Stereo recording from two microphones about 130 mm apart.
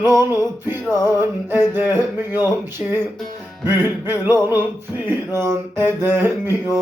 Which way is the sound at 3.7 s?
15° right (ahead or behind).